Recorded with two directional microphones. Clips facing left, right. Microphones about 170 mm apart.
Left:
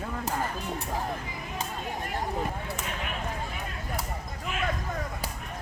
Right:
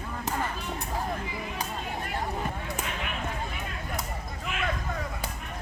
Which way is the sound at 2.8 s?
40° left (ahead or behind).